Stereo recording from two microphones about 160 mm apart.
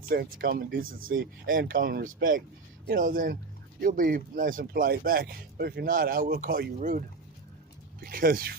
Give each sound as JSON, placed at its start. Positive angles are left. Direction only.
{"t": 0.1, "sound": "speech", "side_deg": -70}
{"t": 8.0, "sound": "speech", "side_deg": -65}